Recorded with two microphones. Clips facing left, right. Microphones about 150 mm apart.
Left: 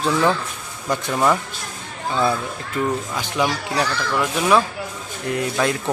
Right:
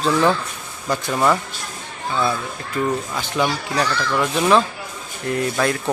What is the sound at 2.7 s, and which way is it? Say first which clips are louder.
Speech: right 1 dB; 15° left (ahead or behind).